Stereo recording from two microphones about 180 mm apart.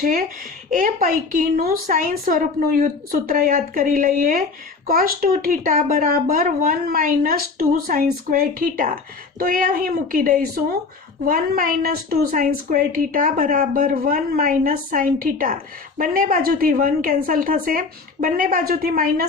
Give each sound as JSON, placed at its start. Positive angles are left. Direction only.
{"t": 0.7, "sound": "a woman's voice", "side_deg": -50}